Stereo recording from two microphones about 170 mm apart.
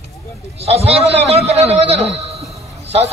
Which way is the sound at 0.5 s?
35° right (ahead or behind).